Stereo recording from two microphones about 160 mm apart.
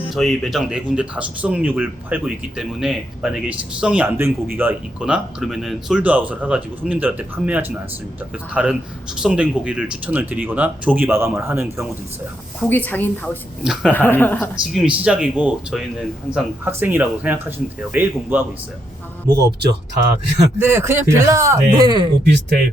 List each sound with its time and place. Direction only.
0.1 s speech: centre (ahead or behind); by 11.9 s 15° right (ahead or behind)
12.6 s a woman's voice: 10° left (ahead or behind)
14.5 s speech: 5° right (ahead or behind)
20.6 s speech: 15° right (ahead or behind)
22.2 s speech: 85° right